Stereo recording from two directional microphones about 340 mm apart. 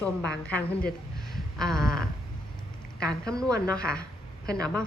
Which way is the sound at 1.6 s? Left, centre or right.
Centre.